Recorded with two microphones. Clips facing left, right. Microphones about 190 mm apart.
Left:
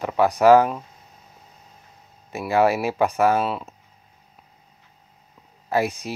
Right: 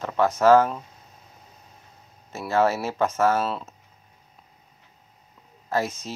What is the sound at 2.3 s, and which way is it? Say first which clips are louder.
Speech: left 3 dB; 15° left (ahead or behind).